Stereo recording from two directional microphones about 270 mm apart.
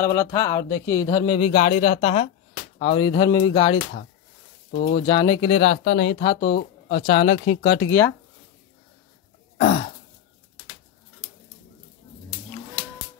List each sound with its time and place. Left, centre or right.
0.0 s speech: centre
4.7 s speech: left
5.0 s speech: centre; by 7.0 s left
7.0 s speech: centre
7.8 s speech: centre
9.6 s throat clearing: left